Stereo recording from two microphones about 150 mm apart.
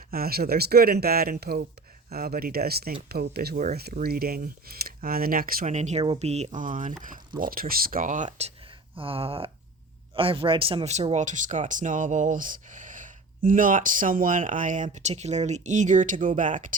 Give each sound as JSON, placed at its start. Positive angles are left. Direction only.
{"t": 0.1, "sound": "speech", "side_deg": -85}
{"t": 5.7, "sound": "speech", "side_deg": -50}
{"t": 7.3, "sound": "speech", "side_deg": -70}
{"t": 9.0, "sound": "a sound", "side_deg": -40}
{"t": 10.2, "sound": "speech", "side_deg": -35}